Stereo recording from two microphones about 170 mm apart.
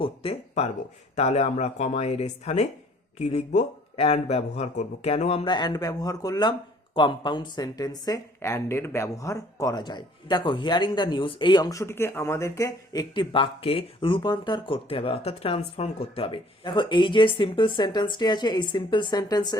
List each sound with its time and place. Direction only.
0.0 s speech: 35° left (ahead or behind)